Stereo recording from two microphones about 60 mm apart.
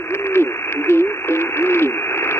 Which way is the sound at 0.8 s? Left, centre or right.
Left.